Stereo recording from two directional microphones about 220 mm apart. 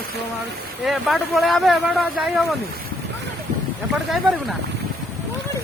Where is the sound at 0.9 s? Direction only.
Centre (ahead or behind).